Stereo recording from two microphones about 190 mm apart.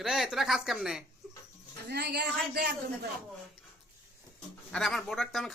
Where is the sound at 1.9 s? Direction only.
60° right (ahead or behind).